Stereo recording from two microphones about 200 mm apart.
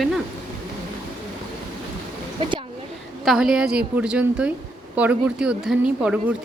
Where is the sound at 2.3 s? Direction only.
25° right (ahead or behind).